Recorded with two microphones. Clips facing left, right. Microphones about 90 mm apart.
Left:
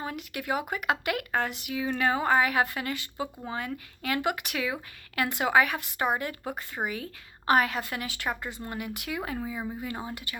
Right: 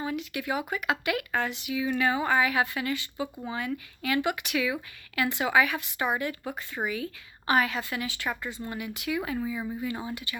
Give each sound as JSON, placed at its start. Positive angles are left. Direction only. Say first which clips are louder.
{"t": 0.0, "sound": "speech", "louder": "right 3 dB", "side_deg": 50}